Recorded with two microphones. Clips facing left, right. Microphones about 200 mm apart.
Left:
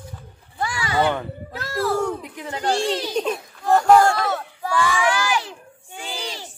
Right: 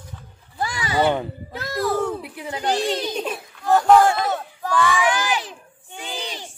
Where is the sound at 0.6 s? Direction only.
20° right (ahead or behind).